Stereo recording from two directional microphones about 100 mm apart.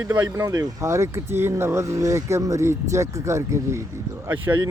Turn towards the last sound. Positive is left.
turn(degrees=-20)  # may be behind; listen again after turning